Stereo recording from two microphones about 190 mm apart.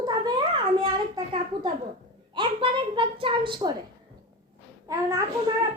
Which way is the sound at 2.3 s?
25° right (ahead or behind).